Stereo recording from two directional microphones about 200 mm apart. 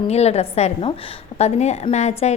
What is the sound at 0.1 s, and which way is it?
A woman's voice, 30° left (ahead or behind).